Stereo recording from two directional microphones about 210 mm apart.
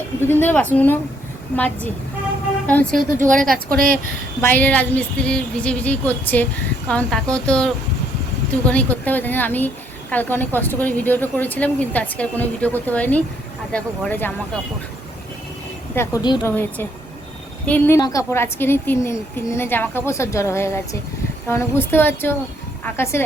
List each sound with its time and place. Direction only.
0.3 s speech: 10° left (ahead or behind)
3.1 s a woman's voice: 40° right (ahead or behind)
4.4 s speech: 10° left (ahead or behind)
16.0 s speech: 20° left (ahead or behind)